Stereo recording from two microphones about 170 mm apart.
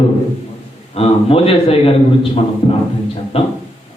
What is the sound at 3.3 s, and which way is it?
Speech, 35° left (ahead or behind).